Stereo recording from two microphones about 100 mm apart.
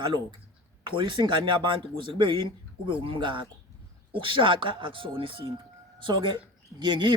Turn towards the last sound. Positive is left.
turn(degrees=-50)  # may be behind; listen again after turning